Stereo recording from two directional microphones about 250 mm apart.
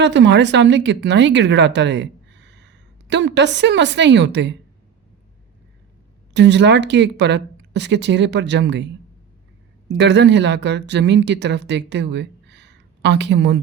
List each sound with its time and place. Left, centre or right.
0.0 s speech: right
6.3 s speech: right
9.9 s speech: right